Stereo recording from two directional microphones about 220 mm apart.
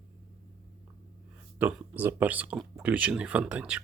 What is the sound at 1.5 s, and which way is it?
Speech, 10° right (ahead or behind).